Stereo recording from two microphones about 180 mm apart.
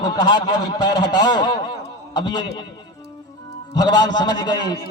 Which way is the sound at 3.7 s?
20° left (ahead or behind).